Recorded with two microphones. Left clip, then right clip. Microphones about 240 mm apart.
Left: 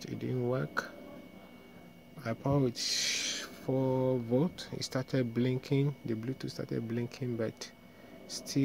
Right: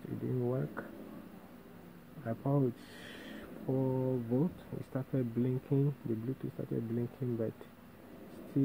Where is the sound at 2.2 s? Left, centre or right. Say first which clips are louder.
Left 2 dB; left.